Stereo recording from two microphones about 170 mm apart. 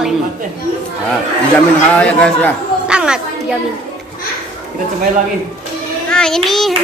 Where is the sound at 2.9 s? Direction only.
5° right (ahead or behind).